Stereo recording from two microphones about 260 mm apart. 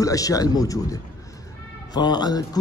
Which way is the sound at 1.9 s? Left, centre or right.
Centre.